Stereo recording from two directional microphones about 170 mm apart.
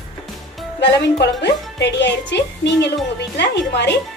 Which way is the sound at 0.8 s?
90° left.